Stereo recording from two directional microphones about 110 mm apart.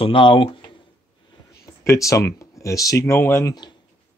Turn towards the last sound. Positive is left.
turn(degrees=25)  # may be behind; listen again after turning